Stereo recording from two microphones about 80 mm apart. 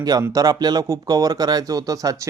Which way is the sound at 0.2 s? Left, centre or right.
Right.